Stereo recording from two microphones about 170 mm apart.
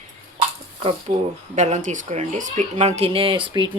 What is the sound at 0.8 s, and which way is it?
Speech, 40° right (ahead or behind).